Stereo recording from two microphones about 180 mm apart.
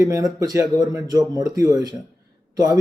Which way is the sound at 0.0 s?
20° right (ahead or behind).